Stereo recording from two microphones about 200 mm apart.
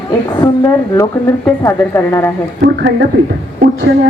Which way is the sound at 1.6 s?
15° left (ahead or behind).